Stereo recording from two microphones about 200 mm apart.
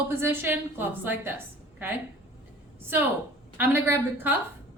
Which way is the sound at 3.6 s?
10° right (ahead or behind).